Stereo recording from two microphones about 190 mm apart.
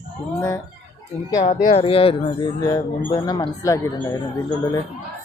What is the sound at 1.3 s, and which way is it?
Speech, 40° left (ahead or behind).